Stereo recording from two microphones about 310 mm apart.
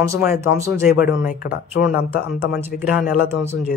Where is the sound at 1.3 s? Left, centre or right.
Left.